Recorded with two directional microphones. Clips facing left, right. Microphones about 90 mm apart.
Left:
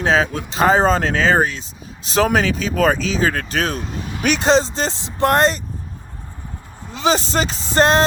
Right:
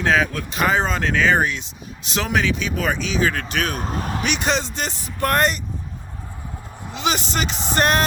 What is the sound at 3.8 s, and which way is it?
Vehicle, 45° right (ahead or behind).